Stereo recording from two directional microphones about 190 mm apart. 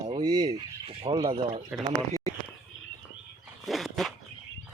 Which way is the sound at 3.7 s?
Centre (ahead or behind).